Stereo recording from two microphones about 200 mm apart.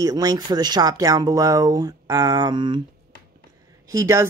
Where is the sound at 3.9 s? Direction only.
15° right (ahead or behind).